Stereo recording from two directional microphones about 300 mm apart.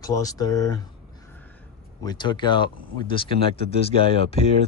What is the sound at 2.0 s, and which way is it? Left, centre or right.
Speech, centre.